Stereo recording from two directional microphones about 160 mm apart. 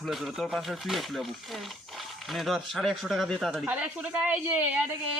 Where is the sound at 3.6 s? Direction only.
10° right (ahead or behind).